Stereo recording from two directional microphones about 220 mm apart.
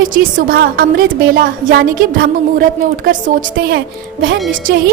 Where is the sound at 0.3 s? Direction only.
40° right (ahead or behind).